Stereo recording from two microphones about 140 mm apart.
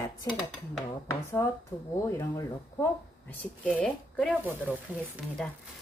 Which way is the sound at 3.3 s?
10° left (ahead or behind).